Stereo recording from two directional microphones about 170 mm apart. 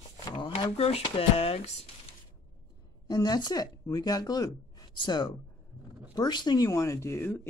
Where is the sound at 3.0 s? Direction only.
25° left (ahead or behind).